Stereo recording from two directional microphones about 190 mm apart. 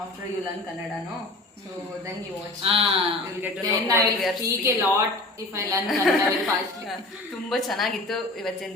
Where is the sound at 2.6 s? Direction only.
30° right (ahead or behind).